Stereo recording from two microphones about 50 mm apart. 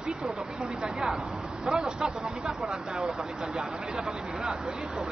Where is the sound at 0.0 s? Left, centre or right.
Centre.